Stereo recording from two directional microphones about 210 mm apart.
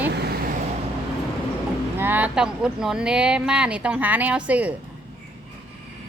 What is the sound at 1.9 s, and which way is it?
Speech, 10° right (ahead or behind).